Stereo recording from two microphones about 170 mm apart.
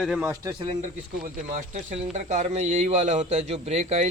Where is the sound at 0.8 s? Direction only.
45° right (ahead or behind).